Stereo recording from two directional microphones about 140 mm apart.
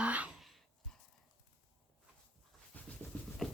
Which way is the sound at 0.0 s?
10° right (ahead or behind).